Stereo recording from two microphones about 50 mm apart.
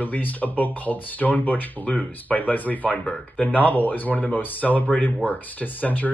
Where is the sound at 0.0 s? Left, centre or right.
Left.